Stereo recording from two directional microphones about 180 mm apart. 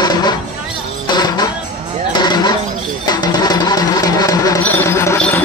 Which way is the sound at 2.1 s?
25° left (ahead or behind).